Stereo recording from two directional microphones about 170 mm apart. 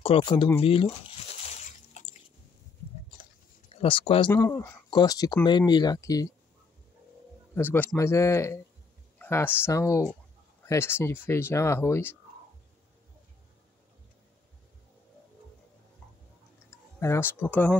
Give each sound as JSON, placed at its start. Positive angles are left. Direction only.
{"t": 0.0, "sound": "speech", "side_deg": 30}
{"t": 1.4, "sound": "a sound", "side_deg": 40}
{"t": 3.8, "sound": "speech", "side_deg": 30}
{"t": 4.3, "sound": "speech", "side_deg": 15}
{"t": 7.5, "sound": "speech", "side_deg": 10}
{"t": 17.0, "sound": "speech", "side_deg": 15}